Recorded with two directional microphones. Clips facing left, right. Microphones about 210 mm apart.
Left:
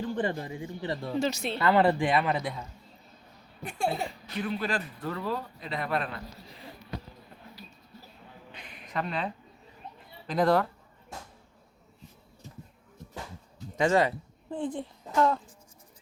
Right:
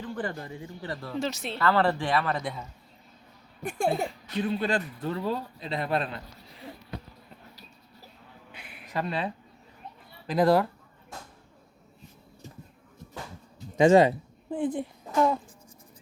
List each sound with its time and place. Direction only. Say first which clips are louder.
0.0 s speech: left 3 dB; 25° left (ahead or behind)
1.1 s speech: left 2 dB; centre (ahead or behind)
1.5 s speech: left 1 dB; 15° left (ahead or behind)
2.3 s speech: left 1 dB; centre (ahead or behind)
3.6 s speech: right 3 dB; 50° right (ahead or behind)
4.4 s a man's voice: right 4 dB; 25° right (ahead or behind)
8.5 s a sound: right 2 dB; 10° right (ahead or behind)
10.2 s speech: right 2 dB; 5° right (ahead or behind)
13.7 s a woman's voice: right 6 dB; 20° right (ahead or behind)